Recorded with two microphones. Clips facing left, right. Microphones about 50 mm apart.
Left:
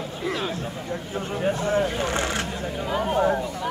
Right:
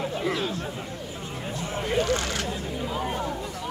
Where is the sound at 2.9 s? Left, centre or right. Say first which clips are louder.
Left 9 dB; left.